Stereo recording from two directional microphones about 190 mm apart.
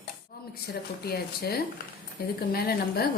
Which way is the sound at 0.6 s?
55° left (ahead or behind).